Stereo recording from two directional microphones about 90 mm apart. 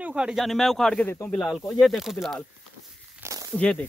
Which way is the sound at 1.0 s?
20° left (ahead or behind).